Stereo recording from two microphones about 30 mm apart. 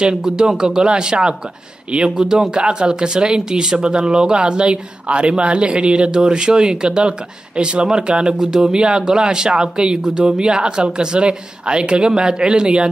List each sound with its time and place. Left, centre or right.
0.1 s speech: centre
2.5 s speech: right
8.4 s speech: centre
8.7 s speech: right